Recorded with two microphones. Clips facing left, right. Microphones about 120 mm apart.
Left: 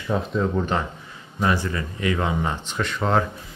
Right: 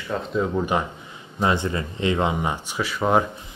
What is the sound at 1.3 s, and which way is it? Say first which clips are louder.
Speech: right 1 dB; 20° right (ahead or behind).